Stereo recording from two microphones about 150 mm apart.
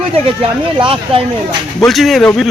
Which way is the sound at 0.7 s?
35° right (ahead or behind).